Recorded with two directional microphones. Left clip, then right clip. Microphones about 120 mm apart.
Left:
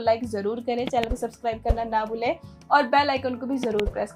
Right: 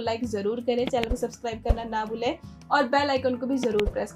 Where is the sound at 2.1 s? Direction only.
45° left (ahead or behind).